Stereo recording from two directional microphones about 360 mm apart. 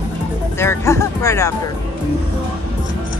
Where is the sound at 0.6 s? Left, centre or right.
Centre.